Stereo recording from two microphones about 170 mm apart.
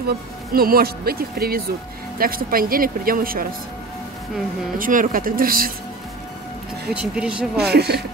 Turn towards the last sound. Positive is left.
turn(degrees=-70)  # may be behind; listen again after turning